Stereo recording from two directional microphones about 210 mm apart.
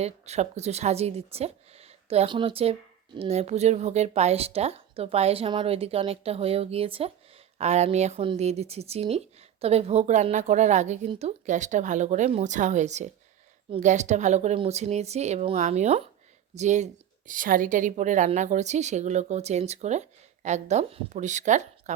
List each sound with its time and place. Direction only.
0.0 s speech: 30° right (ahead or behind)